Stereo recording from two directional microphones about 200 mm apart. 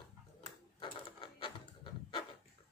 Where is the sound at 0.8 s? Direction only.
25° left (ahead or behind).